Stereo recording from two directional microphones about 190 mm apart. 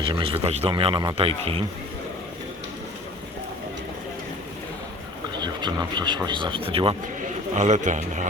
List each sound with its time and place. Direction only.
0.0 s a man's voice: 25° right (ahead or behind)
5.4 s a man's voice: 25° right (ahead or behind); by 8.3 s 40° right (ahead or behind)